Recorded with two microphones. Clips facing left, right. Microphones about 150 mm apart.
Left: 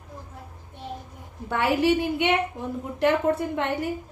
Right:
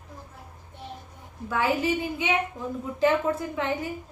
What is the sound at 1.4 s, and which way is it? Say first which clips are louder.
A woman's voice: left 3 dB; 70° left (ahead or behind).